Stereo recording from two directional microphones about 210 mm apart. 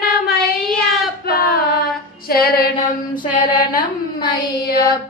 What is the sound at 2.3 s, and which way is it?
Child singing, 45° left (ahead or behind).